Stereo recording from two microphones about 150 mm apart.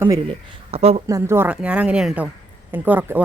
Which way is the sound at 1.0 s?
20° right (ahead or behind).